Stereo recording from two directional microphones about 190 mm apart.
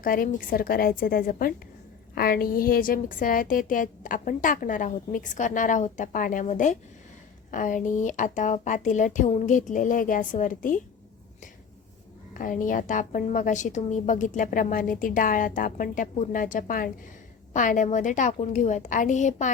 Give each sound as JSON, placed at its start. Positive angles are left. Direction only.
{"t": 0.0, "sound": "a woman's voice", "side_deg": 45}
{"t": 12.3, "sound": "a woman's voice", "side_deg": 45}